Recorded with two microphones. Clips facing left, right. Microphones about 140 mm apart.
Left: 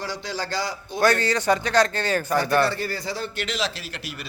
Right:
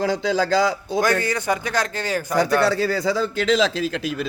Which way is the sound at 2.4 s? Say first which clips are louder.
Right 8 dB; 90° right.